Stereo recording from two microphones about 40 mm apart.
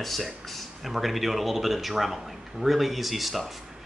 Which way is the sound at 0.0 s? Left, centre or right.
Centre.